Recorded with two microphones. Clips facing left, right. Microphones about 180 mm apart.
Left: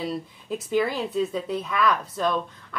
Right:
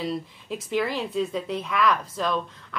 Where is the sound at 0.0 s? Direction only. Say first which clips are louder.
Even; centre (ahead or behind).